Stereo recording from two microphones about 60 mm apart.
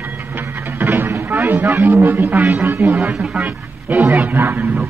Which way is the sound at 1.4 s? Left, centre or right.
Right.